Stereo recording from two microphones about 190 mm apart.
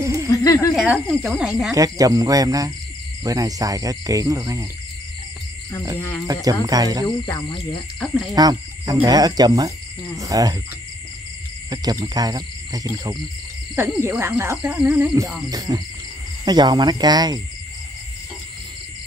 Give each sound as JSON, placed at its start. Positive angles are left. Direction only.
{"t": 0.3, "sound": "a sound", "side_deg": 20}
{"t": 0.7, "sound": "speech", "side_deg": 0}
{"t": 1.7, "sound": "speech", "side_deg": -20}
{"t": 5.9, "sound": "speech", "side_deg": 15}
{"t": 6.2, "sound": "speech", "side_deg": -20}
{"t": 7.2, "sound": "cricket", "side_deg": 25}
{"t": 8.0, "sound": "speech", "side_deg": 0}
{"t": 8.4, "sound": "speech", "side_deg": -20}
{"t": 11.7, "sound": "speech", "side_deg": -20}
{"t": 15.5, "sound": "speech", "side_deg": -20}